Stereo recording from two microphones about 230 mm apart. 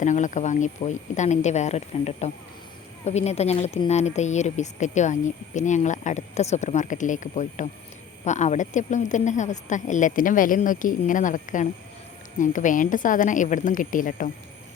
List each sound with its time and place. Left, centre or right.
0.0 s speech: left